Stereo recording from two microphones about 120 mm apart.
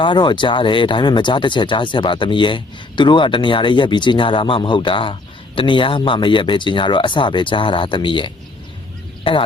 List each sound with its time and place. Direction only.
0.0 s speech: 40° left (ahead or behind)